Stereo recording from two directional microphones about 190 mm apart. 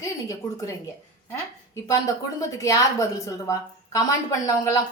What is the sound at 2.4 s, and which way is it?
A woman's voice, 15° left (ahead or behind).